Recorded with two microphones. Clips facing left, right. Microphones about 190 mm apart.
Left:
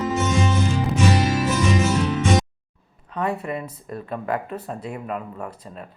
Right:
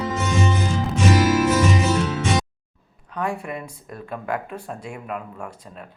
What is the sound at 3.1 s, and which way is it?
Speech, centre (ahead or behind).